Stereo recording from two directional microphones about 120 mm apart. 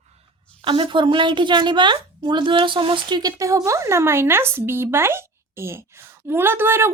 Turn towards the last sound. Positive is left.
turn(degrees=-20)  # may be behind; listen again after turning